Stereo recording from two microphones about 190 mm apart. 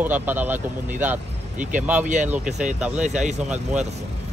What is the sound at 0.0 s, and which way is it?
Speech, 10° right (ahead or behind).